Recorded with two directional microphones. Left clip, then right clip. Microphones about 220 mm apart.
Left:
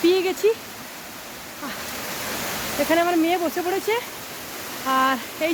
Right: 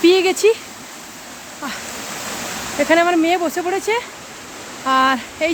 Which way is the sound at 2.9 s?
20° right (ahead or behind).